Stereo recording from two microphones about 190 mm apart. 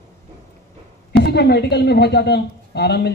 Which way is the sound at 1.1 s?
60° left (ahead or behind).